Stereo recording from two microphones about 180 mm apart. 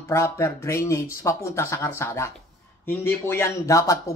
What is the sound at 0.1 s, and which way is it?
Speech, 15° left (ahead or behind).